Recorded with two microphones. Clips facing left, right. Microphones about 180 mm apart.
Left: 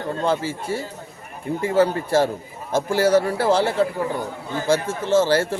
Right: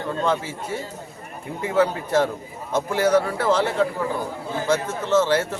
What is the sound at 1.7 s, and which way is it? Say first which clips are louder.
A man's voice: left 1 dB; 30° left (ahead or behind).